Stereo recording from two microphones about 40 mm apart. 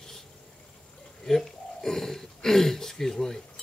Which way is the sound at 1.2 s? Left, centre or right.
Centre.